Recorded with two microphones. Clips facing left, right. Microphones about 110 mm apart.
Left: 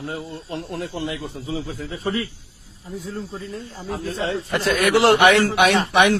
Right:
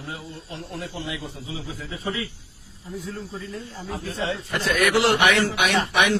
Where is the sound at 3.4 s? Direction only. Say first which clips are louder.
Left 2 dB; 35° left (ahead or behind).